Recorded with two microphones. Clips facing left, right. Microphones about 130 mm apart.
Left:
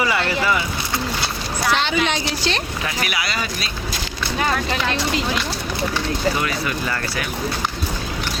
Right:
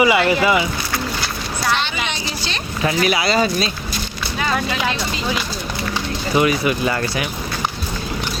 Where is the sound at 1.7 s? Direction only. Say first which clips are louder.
Left 3 dB; centre (ahead or behind).